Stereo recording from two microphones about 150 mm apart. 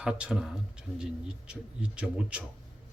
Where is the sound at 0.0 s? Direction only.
5° right (ahead or behind).